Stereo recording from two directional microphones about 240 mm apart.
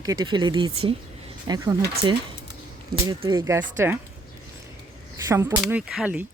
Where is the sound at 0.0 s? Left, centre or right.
Centre.